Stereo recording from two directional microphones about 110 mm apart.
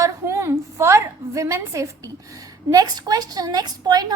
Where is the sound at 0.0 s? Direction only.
25° right (ahead or behind).